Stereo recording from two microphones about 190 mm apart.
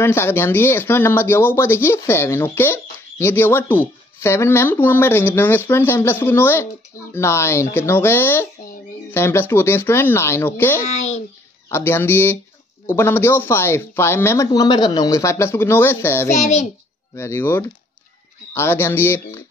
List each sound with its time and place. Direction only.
0.0 s speech: 15° left (ahead or behind)
10.9 s a child's voice: 35° left (ahead or behind)
11.7 s speech: 10° left (ahead or behind)
16.3 s a child's voice: 40° left (ahead or behind)
17.1 s speech: 15° left (ahead or behind)